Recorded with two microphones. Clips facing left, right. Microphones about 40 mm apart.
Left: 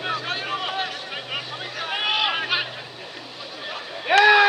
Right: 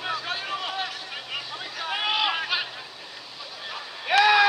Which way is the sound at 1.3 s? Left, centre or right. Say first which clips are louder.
Left 2 dB; centre.